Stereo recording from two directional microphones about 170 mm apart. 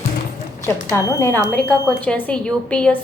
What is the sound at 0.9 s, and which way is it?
A woman's voice, 15° left (ahead or behind).